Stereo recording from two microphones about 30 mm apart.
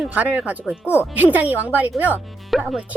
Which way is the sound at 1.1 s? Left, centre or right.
Right.